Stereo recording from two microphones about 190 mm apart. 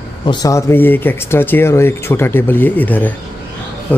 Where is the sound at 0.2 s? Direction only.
20° left (ahead or behind).